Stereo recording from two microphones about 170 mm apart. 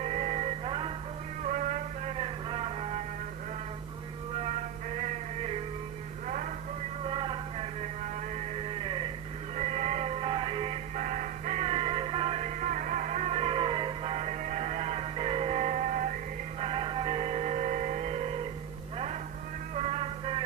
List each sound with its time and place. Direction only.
0.0 s music: 40° right (ahead or behind)
1.4 s music: 50° right (ahead or behind)
4.4 s music: 40° right (ahead or behind)
6.2 s a sound: 50° right (ahead or behind)
7.1 s a sound: 30° right (ahead or behind)
9.6 s music: 45° right (ahead or behind)
16.6 s music: 35° right (ahead or behind)
19.7 s music: 40° right (ahead or behind)